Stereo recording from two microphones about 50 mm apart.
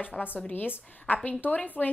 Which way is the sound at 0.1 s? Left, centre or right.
Centre.